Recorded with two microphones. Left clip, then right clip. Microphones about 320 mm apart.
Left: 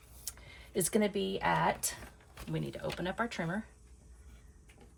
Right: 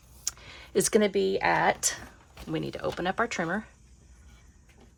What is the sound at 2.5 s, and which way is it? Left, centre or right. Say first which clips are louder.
Speech: right 7 dB; centre.